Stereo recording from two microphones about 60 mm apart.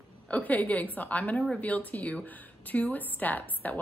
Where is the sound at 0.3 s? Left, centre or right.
Left.